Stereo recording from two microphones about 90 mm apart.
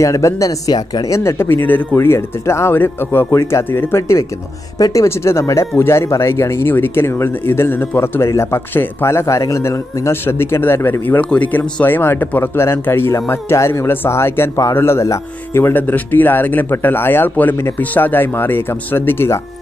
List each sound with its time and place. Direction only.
0.0 s speech: 35° left (ahead or behind)
1.1 s speech: 30° left (ahead or behind)
2.0 s speech: 30° left (ahead or behind)
4.7 s speech: 40° left (ahead or behind)
5.0 s speech: 30° left (ahead or behind)